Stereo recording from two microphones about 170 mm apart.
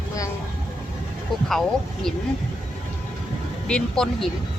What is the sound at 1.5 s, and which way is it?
Speech, centre (ahead or behind).